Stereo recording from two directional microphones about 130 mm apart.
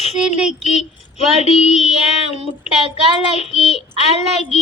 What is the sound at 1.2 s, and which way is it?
Female singing, 55° left (ahead or behind).